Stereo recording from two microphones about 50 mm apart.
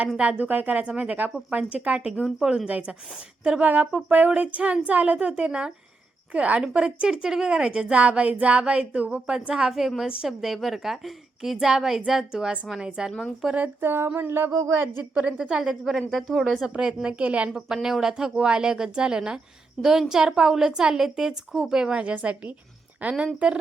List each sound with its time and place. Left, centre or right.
0.2 s a woman's voice: right
0.4 s a woman's voice: right; by 9.7 s centre
10.2 s a woman's voice: centre
13.4 s a woman's voice: centre
13.8 s a sound: right
15.1 s a woman's voice: right
15.4 s a woman's voice: centre
15.7 s a woman's voice: centre
16.6 s a woman's voice: centre
17.8 s a woman's voice: centre
22.0 s a woman's voice: right